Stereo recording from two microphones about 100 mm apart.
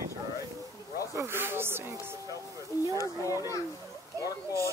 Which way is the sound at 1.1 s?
25° right (ahead or behind).